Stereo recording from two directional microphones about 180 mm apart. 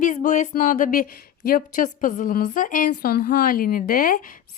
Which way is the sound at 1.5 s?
50° left (ahead or behind).